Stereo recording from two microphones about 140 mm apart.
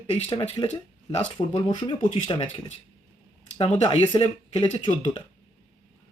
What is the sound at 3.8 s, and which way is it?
Speech, 35° left (ahead or behind).